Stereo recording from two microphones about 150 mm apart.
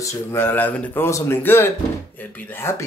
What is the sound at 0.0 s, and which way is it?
Speech, 15° left (ahead or behind).